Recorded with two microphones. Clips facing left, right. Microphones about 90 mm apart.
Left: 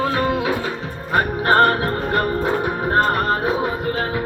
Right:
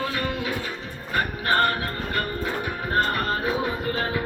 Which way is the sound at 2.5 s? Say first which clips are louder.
Left 7 dB; 40° left (ahead or behind).